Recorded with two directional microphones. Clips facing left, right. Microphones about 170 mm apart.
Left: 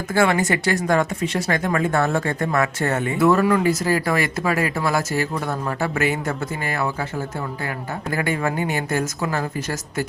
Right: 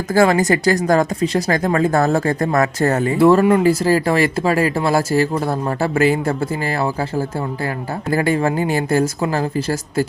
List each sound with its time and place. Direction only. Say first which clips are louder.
0.1 s speech: right 5 dB; 40° right (ahead or behind)